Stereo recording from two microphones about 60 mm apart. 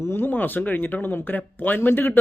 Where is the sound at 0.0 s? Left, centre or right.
Left.